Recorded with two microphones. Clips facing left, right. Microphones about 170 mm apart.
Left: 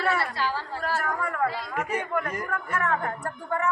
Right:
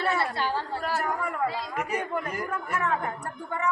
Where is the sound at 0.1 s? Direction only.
25° right (ahead or behind).